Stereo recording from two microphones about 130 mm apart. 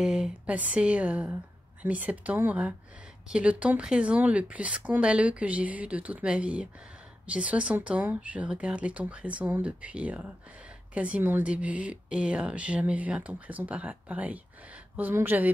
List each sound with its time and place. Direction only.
0.0 s speech: 5° right (ahead or behind)